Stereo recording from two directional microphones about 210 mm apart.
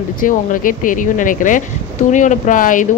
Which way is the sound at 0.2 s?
40° left (ahead or behind).